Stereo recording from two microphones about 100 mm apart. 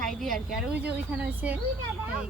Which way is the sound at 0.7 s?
15° right (ahead or behind).